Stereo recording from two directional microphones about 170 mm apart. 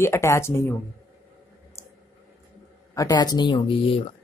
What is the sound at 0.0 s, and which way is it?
Speech, 15° left (ahead or behind).